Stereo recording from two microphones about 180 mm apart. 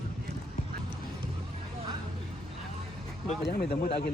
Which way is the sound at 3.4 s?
60° left (ahead or behind).